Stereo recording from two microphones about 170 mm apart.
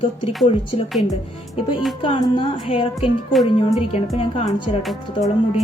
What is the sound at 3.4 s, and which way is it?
Speech, 25° left (ahead or behind).